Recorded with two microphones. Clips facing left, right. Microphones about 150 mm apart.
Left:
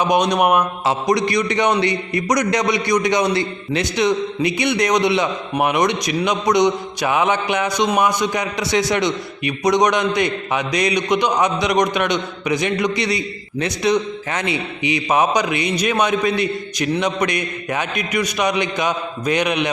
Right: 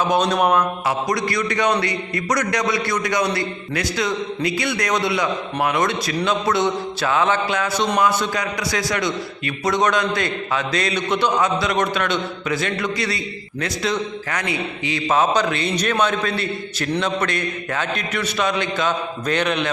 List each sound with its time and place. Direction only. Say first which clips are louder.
0.0 s a man's voice: left 2 dB; 15° left (ahead or behind)